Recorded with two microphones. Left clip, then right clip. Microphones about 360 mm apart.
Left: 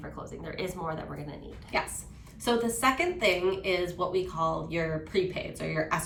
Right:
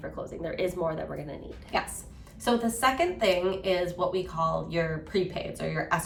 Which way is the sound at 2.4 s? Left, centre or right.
Centre.